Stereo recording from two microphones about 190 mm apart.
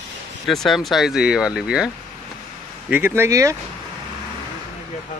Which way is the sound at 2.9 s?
10° right (ahead or behind).